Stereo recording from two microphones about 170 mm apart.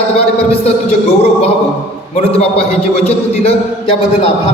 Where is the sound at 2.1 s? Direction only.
35° left (ahead or behind).